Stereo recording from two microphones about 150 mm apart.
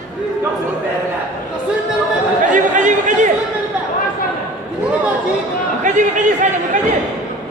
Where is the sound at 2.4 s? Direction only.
60° right (ahead or behind).